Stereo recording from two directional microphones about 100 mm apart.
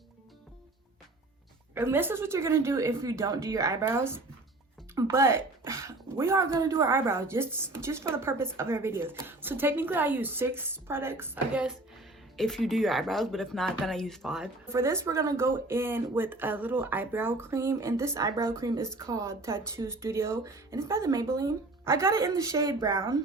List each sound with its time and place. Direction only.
1.7 s speech: 25° right (ahead or behind)
11.5 s speech: 10° right (ahead or behind)
12.4 s speech: 5° left (ahead or behind)
14.7 s speech: 30° right (ahead or behind)